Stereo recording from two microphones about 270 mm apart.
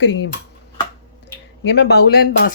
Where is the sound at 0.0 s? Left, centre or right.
Left.